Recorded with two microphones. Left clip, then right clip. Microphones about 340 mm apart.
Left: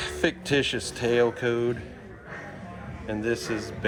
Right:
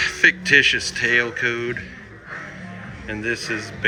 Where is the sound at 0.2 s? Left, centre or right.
Left.